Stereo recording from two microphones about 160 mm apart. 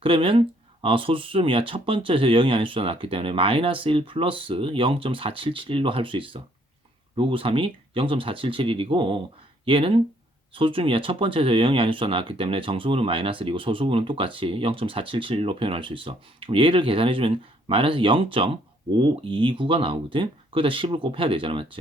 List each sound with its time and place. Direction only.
0.0 s speech: 35° right (ahead or behind)